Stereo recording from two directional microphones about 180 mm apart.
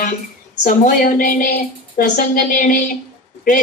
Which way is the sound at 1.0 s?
50° left (ahead or behind).